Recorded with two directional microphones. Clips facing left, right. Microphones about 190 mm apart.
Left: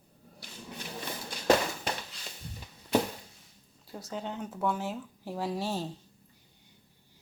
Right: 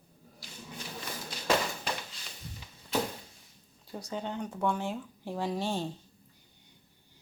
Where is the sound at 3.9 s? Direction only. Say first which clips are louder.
Right 1 dB; centre (ahead or behind).